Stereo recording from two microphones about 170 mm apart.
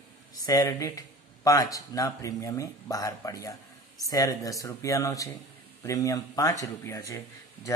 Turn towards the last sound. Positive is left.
turn(degrees=20)  # may be behind; listen again after turning